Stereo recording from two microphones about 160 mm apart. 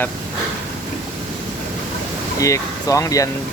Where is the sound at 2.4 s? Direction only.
20° left (ahead or behind).